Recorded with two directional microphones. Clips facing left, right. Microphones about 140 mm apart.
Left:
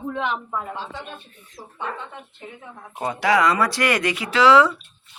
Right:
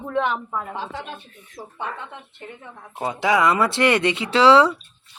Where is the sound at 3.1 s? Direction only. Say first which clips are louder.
Even; 20° right (ahead or behind).